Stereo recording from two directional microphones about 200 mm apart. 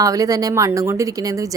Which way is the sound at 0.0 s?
15° right (ahead or behind).